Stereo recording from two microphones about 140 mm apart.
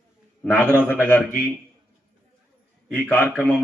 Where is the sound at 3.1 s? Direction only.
10° left (ahead or behind).